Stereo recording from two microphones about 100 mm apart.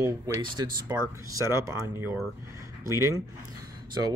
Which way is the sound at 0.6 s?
35° right (ahead or behind).